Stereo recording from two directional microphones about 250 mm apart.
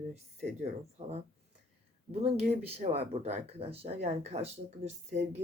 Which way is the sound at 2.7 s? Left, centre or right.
Right.